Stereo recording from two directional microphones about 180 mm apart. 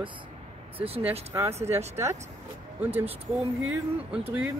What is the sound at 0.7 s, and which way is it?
Speech, 30° right (ahead or behind).